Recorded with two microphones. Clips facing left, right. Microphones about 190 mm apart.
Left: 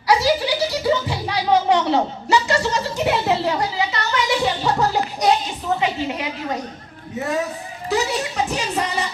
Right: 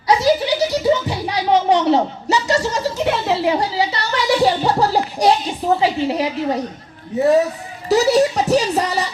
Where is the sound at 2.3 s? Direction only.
40° right (ahead or behind).